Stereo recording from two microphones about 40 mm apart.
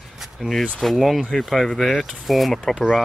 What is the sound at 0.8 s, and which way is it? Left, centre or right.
Speech, centre.